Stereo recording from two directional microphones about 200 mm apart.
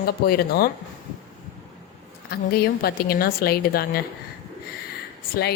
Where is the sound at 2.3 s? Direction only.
50° left (ahead or behind).